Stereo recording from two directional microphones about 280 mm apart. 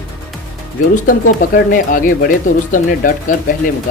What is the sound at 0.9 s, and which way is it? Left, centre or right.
Speech, left.